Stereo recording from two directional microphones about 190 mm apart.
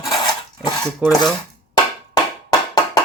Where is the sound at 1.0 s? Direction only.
10° right (ahead or behind).